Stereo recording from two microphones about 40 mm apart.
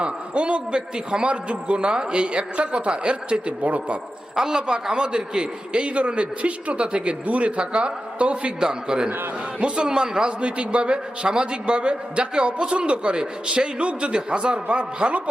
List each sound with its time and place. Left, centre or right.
0.0 s a man's voice: right
4.4 s a man's voice: centre
8.6 s a man's voice: centre